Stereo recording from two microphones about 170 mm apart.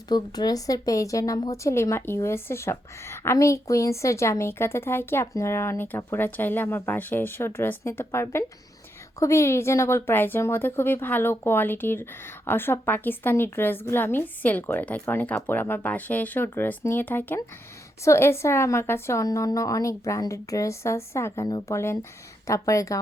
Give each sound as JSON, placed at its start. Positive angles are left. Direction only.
{"t": 0.1, "sound": "a woman's voice", "side_deg": 25}